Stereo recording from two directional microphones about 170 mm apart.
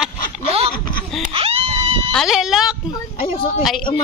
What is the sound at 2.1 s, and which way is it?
Speech, centre (ahead or behind).